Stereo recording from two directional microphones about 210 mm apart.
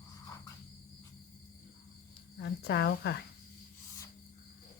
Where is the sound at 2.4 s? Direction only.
50° left (ahead or behind).